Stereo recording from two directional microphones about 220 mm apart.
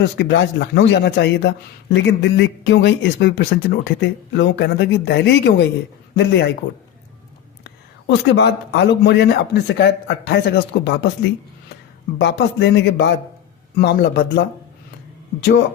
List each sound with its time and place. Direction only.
0.0 s speech: 50° left (ahead or behind)
7.6 s speech: 50° left (ahead or behind)
12.2 s speech: 55° left (ahead or behind)